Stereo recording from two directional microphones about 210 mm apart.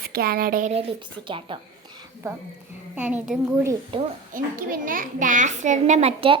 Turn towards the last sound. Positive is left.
turn(degrees=-30)  # may be behind; listen again after turning